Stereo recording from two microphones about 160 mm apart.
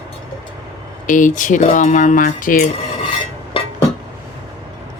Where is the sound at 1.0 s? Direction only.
55° left (ahead or behind).